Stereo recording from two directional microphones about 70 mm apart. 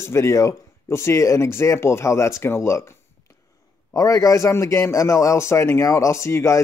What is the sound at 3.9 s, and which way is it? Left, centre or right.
A man's voice, left.